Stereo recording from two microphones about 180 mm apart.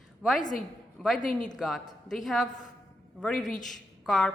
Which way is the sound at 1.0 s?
5° left (ahead or behind).